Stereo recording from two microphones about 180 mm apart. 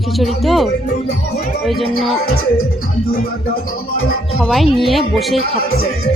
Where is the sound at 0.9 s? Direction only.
60° left (ahead or behind).